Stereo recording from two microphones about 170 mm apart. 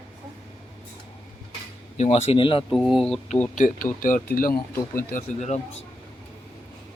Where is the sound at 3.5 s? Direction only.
50° left (ahead or behind).